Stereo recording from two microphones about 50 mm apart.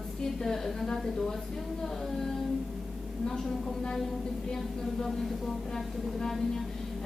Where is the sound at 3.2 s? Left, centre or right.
Centre.